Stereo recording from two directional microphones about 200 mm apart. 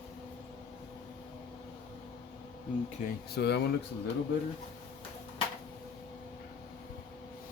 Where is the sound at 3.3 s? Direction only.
55° left (ahead or behind).